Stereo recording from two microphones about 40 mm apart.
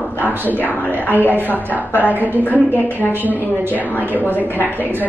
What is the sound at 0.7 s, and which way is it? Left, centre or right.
Speech, left.